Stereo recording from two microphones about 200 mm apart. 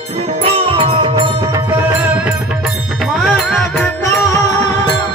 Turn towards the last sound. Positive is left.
turn(degrees=10)  # may be behind; listen again after turning